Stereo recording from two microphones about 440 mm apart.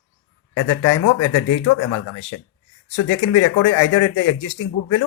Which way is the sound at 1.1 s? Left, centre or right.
Left.